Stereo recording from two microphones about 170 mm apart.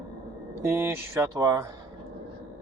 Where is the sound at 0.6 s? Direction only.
15° right (ahead or behind).